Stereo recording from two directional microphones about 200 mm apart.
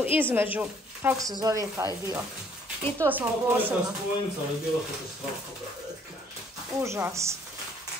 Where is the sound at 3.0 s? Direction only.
10° right (ahead or behind).